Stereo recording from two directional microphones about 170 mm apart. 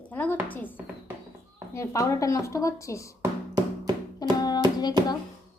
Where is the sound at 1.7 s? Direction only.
15° left (ahead or behind).